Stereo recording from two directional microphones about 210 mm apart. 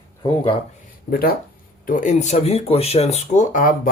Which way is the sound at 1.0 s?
45° left (ahead or behind).